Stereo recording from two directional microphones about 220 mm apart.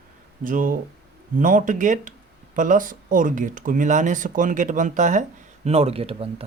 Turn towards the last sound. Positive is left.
turn(degrees=-25)  # may be behind; listen again after turning